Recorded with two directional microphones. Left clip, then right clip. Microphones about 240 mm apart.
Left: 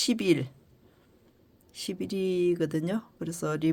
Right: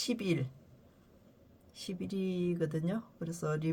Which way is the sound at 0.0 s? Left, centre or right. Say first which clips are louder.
Left 9 dB; left.